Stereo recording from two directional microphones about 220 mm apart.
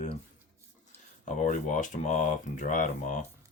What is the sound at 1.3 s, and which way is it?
Speech, 35° left (ahead or behind).